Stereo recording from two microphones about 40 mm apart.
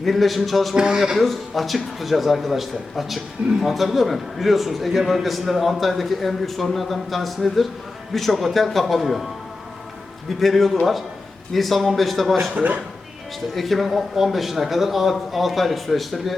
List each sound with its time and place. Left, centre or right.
0.0 s a man's voice: centre
0.8 s speech: centre
1.2 s a man's voice: centre
10.2 s a man's voice: centre
12.5 s speech: right
13.5 s a man's voice: centre